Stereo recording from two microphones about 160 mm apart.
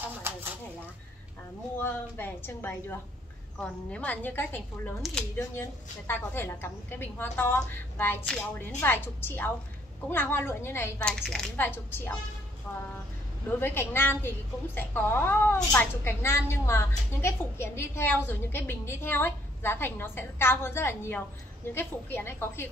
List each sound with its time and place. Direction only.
0.0 s a sound: 15° right (ahead or behind)
1.8 s speech: 15° left (ahead or behind)
11.6 s speech: 15° left (ahead or behind)
13.6 s speech: 15° left (ahead or behind)